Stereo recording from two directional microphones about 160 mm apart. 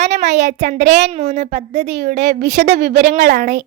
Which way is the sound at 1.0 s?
45° right (ahead or behind).